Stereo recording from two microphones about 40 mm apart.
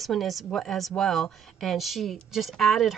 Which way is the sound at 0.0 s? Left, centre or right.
Centre.